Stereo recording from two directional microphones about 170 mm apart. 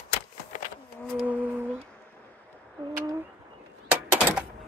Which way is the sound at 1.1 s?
10° right (ahead or behind).